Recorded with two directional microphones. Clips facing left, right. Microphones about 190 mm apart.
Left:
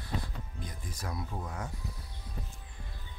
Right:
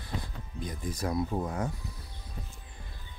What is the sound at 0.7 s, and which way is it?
Speech, 15° right (ahead or behind).